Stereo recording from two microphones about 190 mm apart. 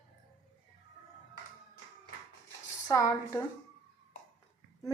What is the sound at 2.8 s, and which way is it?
Speech, 15° left (ahead or behind).